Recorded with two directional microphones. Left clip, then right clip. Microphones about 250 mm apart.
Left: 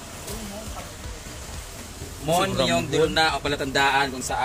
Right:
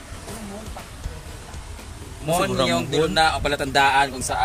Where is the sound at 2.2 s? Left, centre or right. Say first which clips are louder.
Right 1 dB; centre.